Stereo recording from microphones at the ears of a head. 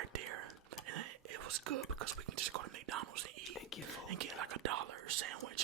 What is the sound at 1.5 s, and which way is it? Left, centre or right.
Speech, right.